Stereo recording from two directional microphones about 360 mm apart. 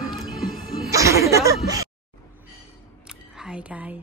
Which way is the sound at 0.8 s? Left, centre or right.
Centre.